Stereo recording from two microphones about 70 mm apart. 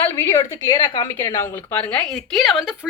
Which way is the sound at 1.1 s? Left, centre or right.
Left.